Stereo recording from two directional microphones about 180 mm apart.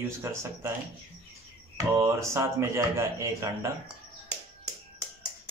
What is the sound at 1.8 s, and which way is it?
Speech, 15° right (ahead or behind).